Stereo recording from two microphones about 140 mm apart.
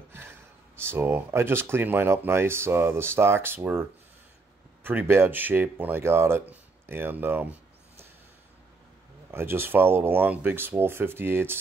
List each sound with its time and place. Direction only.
0.1 s speech: 15° right (ahead or behind)
4.8 s speech: 15° right (ahead or behind)
9.3 s speech: 15° right (ahead or behind)